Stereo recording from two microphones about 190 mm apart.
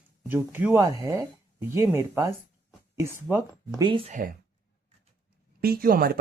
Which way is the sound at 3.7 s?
25° right (ahead or behind).